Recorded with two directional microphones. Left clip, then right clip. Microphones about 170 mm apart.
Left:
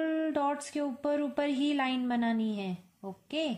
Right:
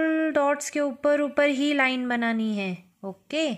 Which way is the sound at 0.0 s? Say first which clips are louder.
Right 7 dB; 45° right (ahead or behind).